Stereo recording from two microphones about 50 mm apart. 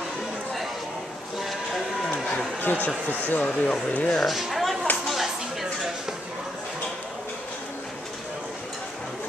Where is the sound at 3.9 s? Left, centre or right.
Left.